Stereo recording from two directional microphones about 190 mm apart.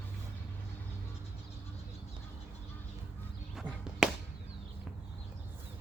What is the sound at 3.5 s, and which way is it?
Chop, 5° right (ahead or behind).